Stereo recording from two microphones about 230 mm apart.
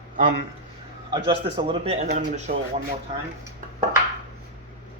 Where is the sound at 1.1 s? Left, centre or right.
Right.